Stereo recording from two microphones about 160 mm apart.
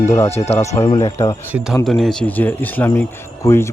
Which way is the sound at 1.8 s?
Centre (ahead or behind).